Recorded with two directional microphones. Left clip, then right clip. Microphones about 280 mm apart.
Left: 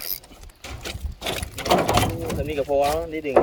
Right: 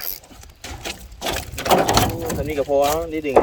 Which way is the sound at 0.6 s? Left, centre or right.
Centre.